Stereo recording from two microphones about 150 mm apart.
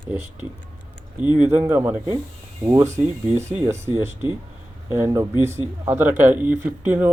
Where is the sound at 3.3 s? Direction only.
50° right (ahead or behind).